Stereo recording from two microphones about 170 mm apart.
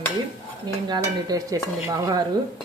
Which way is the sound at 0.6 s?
25° right (ahead or behind).